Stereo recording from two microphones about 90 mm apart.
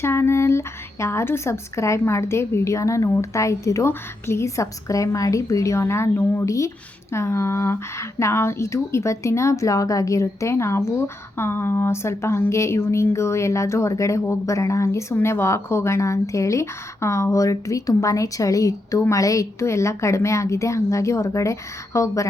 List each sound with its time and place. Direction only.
0.0 s speech: 30° left (ahead or behind)